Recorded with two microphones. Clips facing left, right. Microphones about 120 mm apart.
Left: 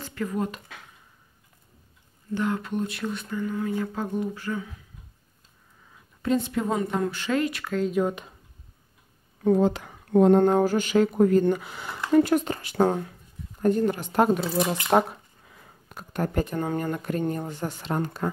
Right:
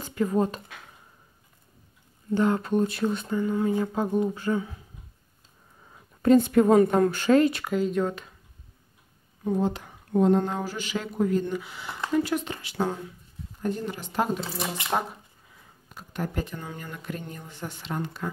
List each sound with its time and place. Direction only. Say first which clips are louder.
0.0 s speech: right 4 dB; 20° right (ahead or behind)
2.3 s speech: right 4 dB; 35° right (ahead or behind)
6.2 s a woman's voice: right 7 dB; 50° right (ahead or behind); by 7.6 s 35° right (ahead or behind)
7.7 s speech: even; centre (ahead or behind)
8.0 s speech: left 2 dB; 20° left (ahead or behind)
9.4 s speech: left 5 dB; 85° left; by 14.4 s 55° left (ahead or behind)
14.9 s speech: left 7 dB; 65° left (ahead or behind)
15.5 s speech: left 3 dB; 55° left (ahead or behind)